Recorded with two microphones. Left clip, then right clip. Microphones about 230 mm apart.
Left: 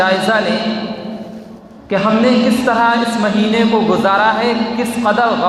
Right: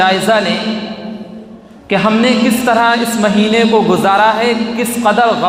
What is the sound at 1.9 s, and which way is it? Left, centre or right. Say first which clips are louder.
A man's voice: right 1 dB; right.